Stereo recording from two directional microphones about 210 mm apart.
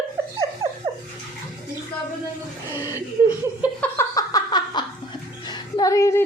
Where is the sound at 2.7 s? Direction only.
10° right (ahead or behind).